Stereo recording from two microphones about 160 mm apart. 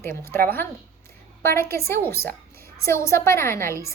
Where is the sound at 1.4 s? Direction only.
15° left (ahead or behind).